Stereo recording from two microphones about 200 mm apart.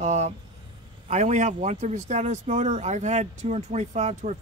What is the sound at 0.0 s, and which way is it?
Speech, 35° right (ahead or behind).